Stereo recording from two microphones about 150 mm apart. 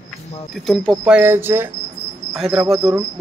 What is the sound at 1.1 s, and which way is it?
Cricket, 15° right (ahead or behind).